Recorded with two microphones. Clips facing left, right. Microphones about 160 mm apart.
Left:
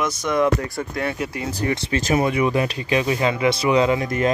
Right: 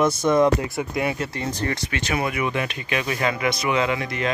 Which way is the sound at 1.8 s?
35° left (ahead or behind).